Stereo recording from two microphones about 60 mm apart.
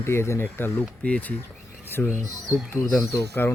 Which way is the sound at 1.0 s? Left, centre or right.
Left.